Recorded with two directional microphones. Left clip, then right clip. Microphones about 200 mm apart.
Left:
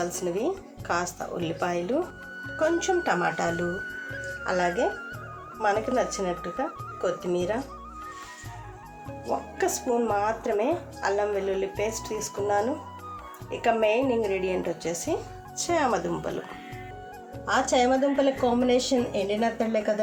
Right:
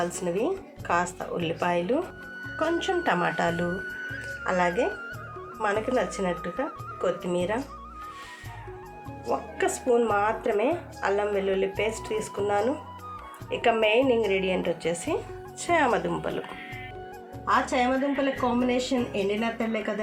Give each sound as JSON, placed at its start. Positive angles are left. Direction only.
{"t": 0.0, "sound": "speech", "side_deg": 0}
{"t": 9.2, "sound": "speech", "side_deg": 0}
{"t": 17.4, "sound": "speech", "side_deg": -15}
{"t": 18.3, "sound": "speech", "side_deg": 0}